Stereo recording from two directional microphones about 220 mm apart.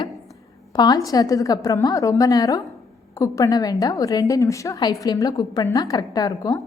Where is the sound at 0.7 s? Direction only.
20° left (ahead or behind).